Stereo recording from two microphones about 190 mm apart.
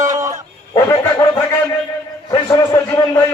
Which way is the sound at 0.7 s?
15° left (ahead or behind).